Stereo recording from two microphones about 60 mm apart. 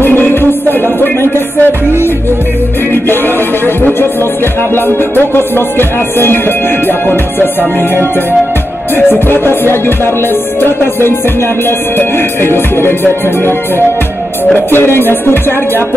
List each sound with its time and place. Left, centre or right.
0.0 s music: left
3.6 s music: left
9.3 s music: left
14.7 s music: left